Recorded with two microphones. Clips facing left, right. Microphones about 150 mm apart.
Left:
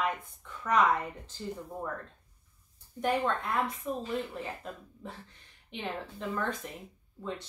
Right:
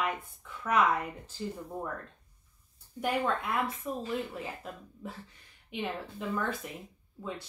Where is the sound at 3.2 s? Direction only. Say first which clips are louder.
Even; 5° right (ahead or behind).